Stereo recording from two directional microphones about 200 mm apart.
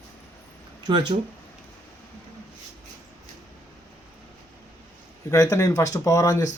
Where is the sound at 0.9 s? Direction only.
25° right (ahead or behind).